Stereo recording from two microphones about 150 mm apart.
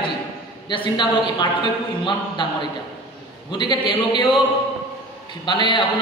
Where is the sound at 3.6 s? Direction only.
30° left (ahead or behind).